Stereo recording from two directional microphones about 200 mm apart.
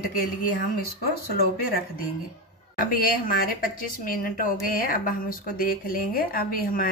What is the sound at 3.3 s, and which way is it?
A woman's voice, 45° left (ahead or behind).